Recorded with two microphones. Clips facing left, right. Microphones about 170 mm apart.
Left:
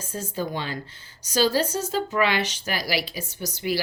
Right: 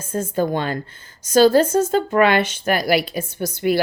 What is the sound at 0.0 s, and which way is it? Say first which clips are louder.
Speech: right 9 dB; 50° right (ahead or behind).